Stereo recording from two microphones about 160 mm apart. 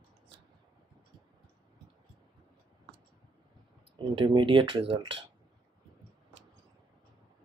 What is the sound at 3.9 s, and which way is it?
Speech, 30° right (ahead or behind).